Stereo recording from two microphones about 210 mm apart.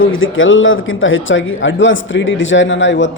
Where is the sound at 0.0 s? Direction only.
70° left (ahead or behind).